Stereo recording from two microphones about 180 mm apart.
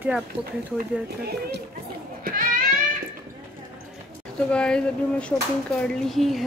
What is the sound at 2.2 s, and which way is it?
Children playing, 50° right (ahead or behind).